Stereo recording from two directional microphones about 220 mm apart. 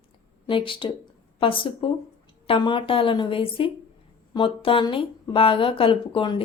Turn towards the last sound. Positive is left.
turn(degrees=25)  # may be behind; listen again after turning